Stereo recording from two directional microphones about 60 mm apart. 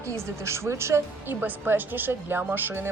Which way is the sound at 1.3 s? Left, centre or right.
Right.